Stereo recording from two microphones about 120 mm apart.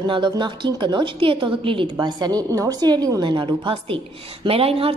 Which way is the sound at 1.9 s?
35° right (ahead or behind).